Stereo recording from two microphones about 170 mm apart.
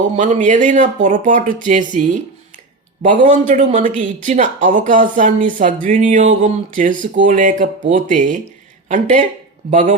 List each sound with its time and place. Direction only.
0.0 s speech: 50° right (ahead or behind)